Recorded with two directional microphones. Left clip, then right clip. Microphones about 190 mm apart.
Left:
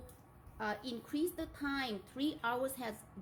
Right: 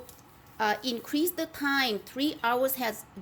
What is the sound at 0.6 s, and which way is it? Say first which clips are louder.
A woman's voice: right 12 dB; 40° right (ahead or behind).